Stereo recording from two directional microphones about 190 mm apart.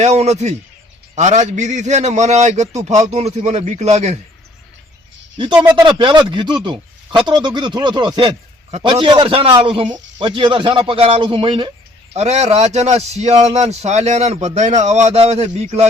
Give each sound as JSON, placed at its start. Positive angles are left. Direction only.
{"t": 0.0, "sound": "a man's voice", "side_deg": -35}
{"t": 5.7, "sound": "a man's voice", "side_deg": -25}